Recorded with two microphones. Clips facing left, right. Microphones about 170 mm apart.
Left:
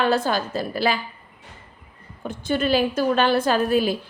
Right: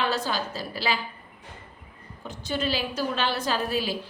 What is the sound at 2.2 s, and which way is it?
A woman's voice, 55° left (ahead or behind).